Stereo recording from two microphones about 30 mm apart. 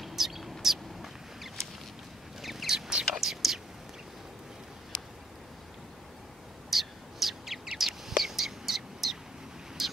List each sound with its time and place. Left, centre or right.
0.0 s bird: centre
2.4 s a sound: centre
2.7 s whispering: right
3.2 s whispering: centre
6.7 s bird: centre
8.1 s whispering: centre
9.8 s vehicle: centre